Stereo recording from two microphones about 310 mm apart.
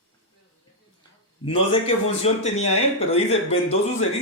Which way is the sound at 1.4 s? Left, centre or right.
Centre.